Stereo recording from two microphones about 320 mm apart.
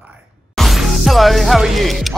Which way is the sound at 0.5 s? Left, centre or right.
Centre.